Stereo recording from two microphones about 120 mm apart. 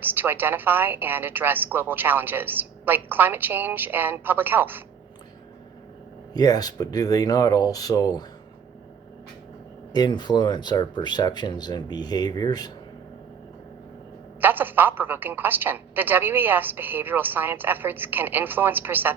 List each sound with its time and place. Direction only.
0.0 s a woman's voice: 15° right (ahead or behind)
6.3 s speech: 30° left (ahead or behind)
9.9 s speech: 35° left (ahead or behind)
14.4 s a woman's voice: 15° right (ahead or behind)